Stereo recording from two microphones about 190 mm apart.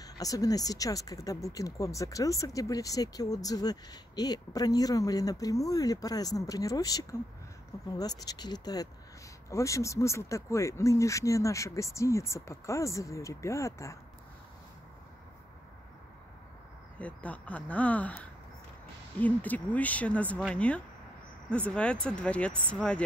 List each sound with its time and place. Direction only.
0.2 s speech: 20° left (ahead or behind)
17.0 s speech: 5° left (ahead or behind)